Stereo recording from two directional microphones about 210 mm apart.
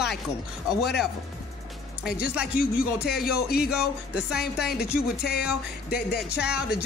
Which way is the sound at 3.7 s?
5° right (ahead or behind).